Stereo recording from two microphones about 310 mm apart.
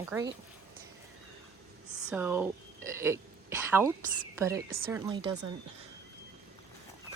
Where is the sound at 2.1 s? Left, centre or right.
Centre.